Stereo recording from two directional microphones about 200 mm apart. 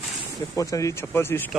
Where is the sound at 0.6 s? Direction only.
15° left (ahead or behind).